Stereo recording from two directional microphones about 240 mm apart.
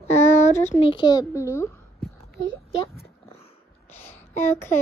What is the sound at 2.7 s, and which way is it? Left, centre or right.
Speech, left.